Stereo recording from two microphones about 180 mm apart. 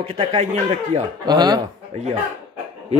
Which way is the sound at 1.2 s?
25° right (ahead or behind).